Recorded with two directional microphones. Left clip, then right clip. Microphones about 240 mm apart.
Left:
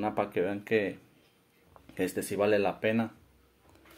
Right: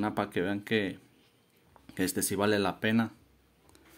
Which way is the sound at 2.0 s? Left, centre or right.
Right.